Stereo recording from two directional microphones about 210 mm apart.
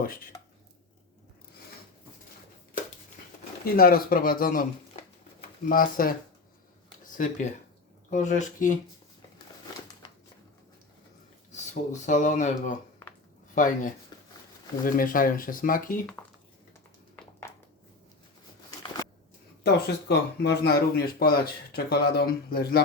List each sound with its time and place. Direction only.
0.0 s speech: 45° left (ahead or behind)
3.6 s speech: 45° left (ahead or behind)
5.6 s speech: 40° left (ahead or behind)
8.1 s speech: 35° left (ahead or behind)
11.5 s speech: 35° left (ahead or behind)
14.1 s crumpling: 20° left (ahead or behind)
14.8 s speech: 40° left (ahead or behind)
17.2 s a sound: 10° left (ahead or behind)
19.6 s speech: 50° left (ahead or behind)